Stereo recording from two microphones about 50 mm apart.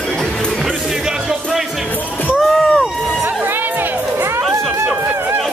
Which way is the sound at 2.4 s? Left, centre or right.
Centre.